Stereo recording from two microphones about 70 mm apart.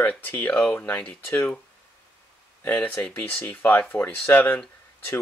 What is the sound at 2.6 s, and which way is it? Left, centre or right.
Speech, left.